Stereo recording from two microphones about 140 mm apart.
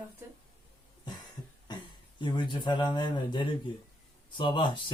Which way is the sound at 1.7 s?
30° left (ahead or behind).